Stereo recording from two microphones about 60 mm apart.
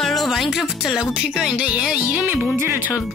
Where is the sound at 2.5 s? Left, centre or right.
Right.